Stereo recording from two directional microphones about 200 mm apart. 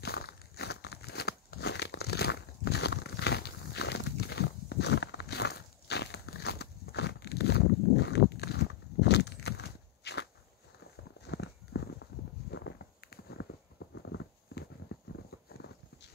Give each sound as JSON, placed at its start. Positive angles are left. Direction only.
{"t": 0.0, "sound": "crumpling", "side_deg": 50}
{"t": 11.1, "sound": "a sound", "side_deg": 55}
{"t": 15.5, "sound": "clip-clop", "side_deg": 55}